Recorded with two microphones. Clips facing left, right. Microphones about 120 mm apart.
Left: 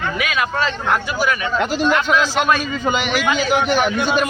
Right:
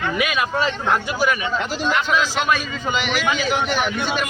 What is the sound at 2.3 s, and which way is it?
A man's voice, 50° left (ahead or behind).